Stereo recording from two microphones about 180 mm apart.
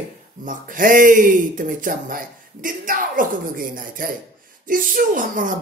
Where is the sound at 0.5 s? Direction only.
50° right (ahead or behind).